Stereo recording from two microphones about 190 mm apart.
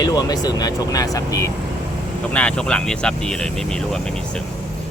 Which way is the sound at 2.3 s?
5° left (ahead or behind).